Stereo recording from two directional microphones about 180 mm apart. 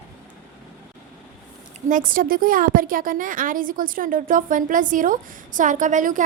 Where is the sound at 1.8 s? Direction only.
50° right (ahead or behind).